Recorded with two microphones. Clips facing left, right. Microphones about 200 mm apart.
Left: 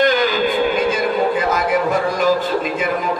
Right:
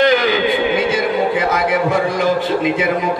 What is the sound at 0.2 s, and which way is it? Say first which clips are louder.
Music: right 1 dB; 70° right (ahead or behind).